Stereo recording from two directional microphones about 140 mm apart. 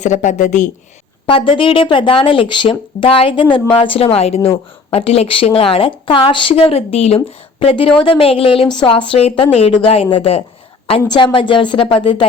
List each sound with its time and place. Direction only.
0.0 s speech: 60° left (ahead or behind)
1.3 s a woman's voice: 40° left (ahead or behind)